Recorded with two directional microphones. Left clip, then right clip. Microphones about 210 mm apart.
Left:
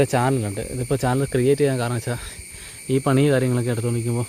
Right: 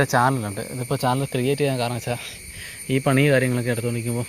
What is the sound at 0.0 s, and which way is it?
Speech, 30° left (ahead or behind).